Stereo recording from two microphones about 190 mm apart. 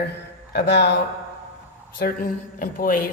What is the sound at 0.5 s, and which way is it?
Speech, 60° left (ahead or behind).